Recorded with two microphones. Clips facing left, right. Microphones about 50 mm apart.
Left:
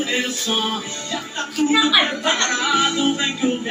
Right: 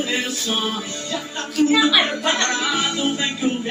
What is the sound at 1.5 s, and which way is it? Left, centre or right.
Speech, centre.